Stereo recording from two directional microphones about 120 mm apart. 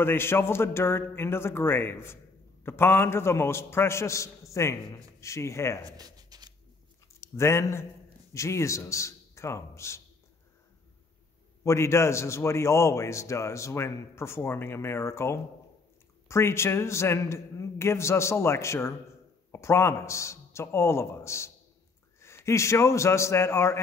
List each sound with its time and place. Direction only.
0.0 s a man's voice: 20° left (ahead or behind)
5.9 s a sound: 30° right (ahead or behind)
7.2 s a man's voice: 25° left (ahead or behind)
11.6 s a man's voice: 25° left (ahead or behind)